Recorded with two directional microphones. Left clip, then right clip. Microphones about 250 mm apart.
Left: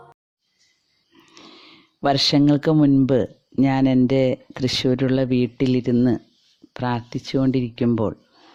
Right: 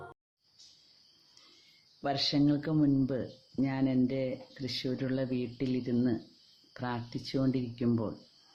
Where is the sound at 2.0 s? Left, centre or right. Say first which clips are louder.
Left 12 dB; left.